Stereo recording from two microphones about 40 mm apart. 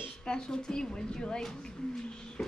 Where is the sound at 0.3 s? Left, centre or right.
Centre.